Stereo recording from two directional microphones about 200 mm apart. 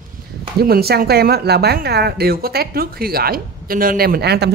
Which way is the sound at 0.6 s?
50° right (ahead or behind).